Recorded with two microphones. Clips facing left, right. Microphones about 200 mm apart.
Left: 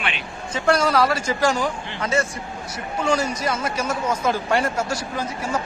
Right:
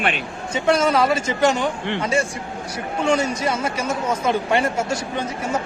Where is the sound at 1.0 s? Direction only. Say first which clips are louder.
Right 2 dB; 25° right (ahead or behind).